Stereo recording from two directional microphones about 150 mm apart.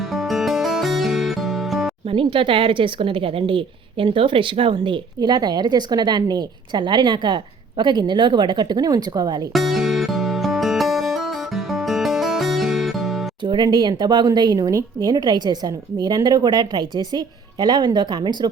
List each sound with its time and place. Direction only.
0.0 s music: centre (ahead or behind)
2.0 s speech: 35° right (ahead or behind)
9.5 s music: centre (ahead or behind)
13.4 s speech: 30° right (ahead or behind)